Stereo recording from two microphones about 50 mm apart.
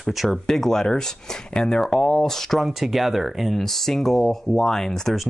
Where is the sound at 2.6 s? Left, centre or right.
Centre.